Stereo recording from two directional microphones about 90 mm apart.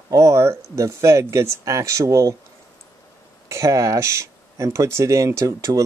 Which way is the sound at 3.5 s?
35° right (ahead or behind).